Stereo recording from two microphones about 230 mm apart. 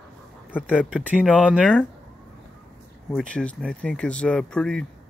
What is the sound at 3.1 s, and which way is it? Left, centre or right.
Speech, centre.